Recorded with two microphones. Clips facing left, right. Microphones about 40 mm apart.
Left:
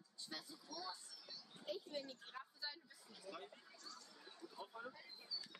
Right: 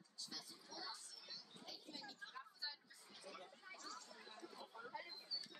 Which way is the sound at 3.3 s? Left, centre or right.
Right.